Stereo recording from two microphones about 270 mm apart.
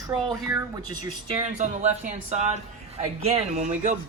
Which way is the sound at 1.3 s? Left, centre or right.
Right.